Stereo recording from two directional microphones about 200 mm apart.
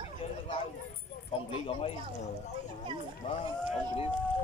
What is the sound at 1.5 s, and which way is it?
Speech, 30° left (ahead or behind).